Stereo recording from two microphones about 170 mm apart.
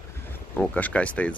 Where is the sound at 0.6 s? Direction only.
10° left (ahead or behind).